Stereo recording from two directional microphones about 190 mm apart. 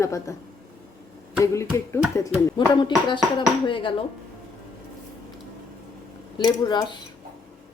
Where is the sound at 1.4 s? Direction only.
15° left (ahead or behind).